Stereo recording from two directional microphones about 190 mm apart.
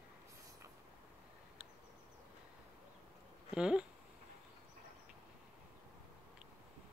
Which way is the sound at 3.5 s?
5° right (ahead or behind).